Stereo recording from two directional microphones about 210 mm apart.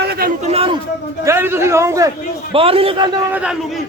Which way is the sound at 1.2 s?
10° right (ahead or behind).